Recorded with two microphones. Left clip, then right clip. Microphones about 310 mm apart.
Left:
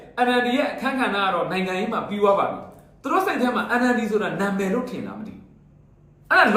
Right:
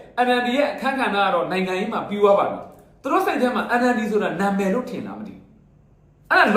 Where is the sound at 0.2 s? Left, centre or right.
Centre.